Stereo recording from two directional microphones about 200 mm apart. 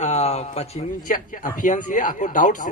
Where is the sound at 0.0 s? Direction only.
35° left (ahead or behind).